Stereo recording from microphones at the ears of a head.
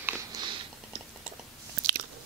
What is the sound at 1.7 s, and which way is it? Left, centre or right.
Chewing, right.